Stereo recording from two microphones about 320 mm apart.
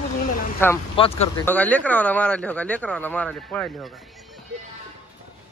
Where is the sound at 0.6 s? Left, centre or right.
Centre.